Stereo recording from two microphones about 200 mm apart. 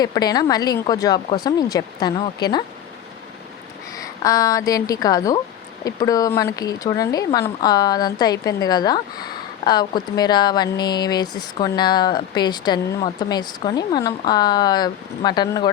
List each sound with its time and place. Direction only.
0.0 s speech: 20° left (ahead or behind)
3.9 s a woman's voice: 15° left (ahead or behind)